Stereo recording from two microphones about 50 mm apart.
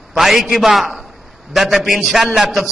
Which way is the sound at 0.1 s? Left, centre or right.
Centre.